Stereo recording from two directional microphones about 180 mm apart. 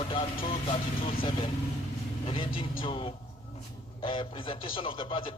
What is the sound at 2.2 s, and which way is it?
A man's voice, 30° left (ahead or behind).